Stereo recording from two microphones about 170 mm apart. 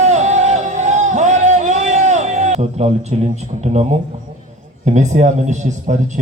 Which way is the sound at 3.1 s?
40° right (ahead or behind).